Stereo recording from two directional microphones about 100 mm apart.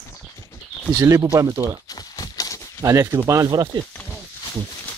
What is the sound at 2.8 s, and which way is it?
Speech, 30° right (ahead or behind).